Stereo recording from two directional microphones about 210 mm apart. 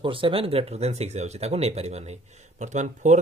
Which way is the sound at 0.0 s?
25° right (ahead or behind).